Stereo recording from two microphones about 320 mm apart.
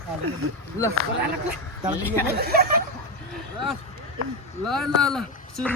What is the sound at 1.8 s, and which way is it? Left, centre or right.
Speech, centre.